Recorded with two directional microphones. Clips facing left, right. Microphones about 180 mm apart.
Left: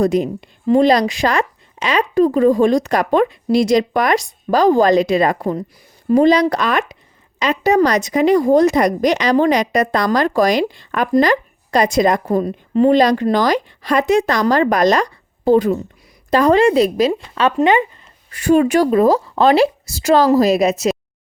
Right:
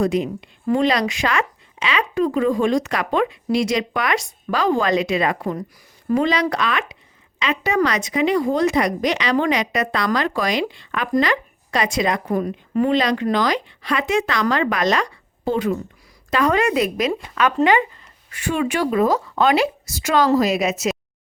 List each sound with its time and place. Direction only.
0.0 s speech: 40° left (ahead or behind)
12.4 s a woman's voice: 30° left (ahead or behind)
12.9 s a woman's voice: 40° left (ahead or behind); by 18.1 s 20° left (ahead or behind)
18.3 s speech: 40° left (ahead or behind)